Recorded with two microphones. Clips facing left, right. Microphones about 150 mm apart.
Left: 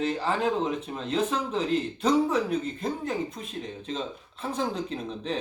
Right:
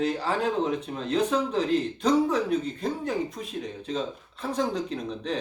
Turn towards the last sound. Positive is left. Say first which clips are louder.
# right 1 dB
turn(degrees=0)  # may be behind; listen again after turning